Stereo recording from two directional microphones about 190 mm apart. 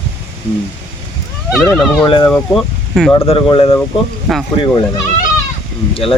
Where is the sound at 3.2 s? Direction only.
30° left (ahead or behind).